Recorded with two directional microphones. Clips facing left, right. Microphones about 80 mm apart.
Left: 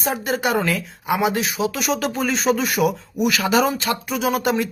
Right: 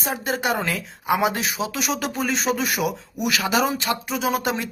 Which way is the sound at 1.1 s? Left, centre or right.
Right.